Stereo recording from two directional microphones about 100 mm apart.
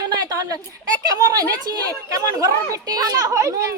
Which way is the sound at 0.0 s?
40° right (ahead or behind).